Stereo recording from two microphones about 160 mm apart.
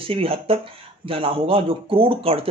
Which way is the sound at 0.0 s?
35° right (ahead or behind).